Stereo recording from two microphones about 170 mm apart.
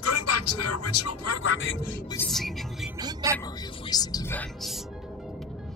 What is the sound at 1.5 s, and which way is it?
Speech, 90° left.